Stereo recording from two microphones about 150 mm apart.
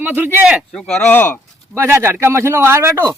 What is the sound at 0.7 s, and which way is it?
Speech, 10° left (ahead or behind).